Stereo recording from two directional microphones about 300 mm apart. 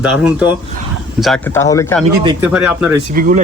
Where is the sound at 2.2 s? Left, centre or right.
Centre.